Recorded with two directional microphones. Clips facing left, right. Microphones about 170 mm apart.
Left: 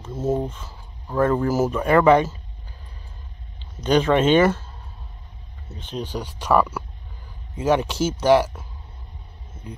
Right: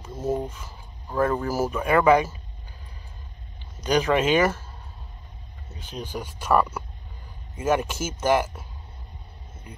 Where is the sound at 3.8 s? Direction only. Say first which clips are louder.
Left 4 dB; 10° right (ahead or behind).